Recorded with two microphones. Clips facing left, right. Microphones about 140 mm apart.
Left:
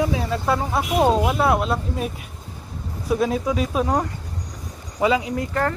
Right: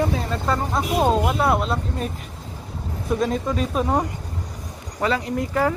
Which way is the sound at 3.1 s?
5° left (ahead or behind).